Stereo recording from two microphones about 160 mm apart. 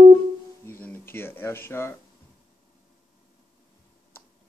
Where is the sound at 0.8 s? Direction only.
10° left (ahead or behind).